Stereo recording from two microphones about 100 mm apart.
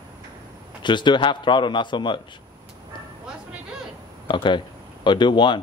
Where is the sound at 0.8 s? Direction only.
50° left (ahead or behind).